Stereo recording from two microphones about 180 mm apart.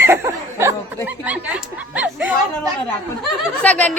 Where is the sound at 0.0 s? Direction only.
15° right (ahead or behind).